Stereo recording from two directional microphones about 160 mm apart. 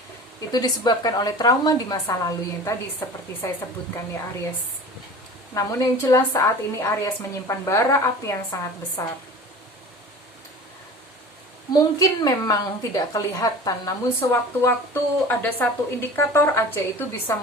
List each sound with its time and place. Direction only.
0.5 s a woman's voice: 25° left (ahead or behind)
5.5 s a woman's voice: 20° left (ahead or behind)
11.7 s a woman's voice: 25° left (ahead or behind)